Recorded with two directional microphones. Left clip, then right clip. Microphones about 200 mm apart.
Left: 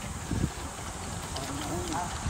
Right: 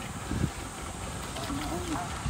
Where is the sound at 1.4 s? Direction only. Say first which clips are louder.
Right 1 dB; centre (ahead or behind).